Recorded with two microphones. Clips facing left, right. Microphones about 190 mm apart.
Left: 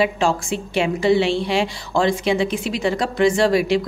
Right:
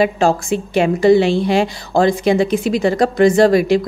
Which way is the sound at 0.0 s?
40° right (ahead or behind).